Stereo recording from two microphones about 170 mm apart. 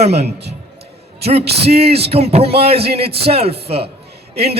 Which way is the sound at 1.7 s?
35° right (ahead or behind).